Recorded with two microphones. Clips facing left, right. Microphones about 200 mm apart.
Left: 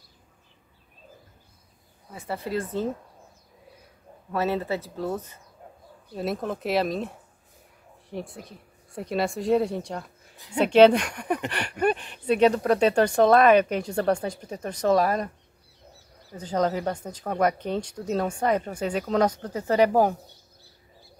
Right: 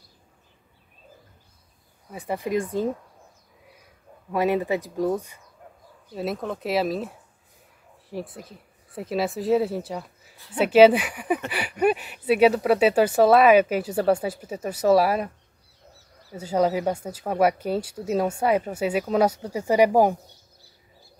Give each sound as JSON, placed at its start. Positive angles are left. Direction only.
{"t": 2.1, "sound": "speech", "side_deg": -15}
{"t": 4.3, "sound": "speech", "side_deg": -15}
{"t": 6.1, "sound": "a woman's voice", "side_deg": 0}
{"t": 10.3, "sound": "speech", "side_deg": 15}
{"t": 10.6, "sound": "speech", "side_deg": -5}
{"t": 16.3, "sound": "speech", "side_deg": -10}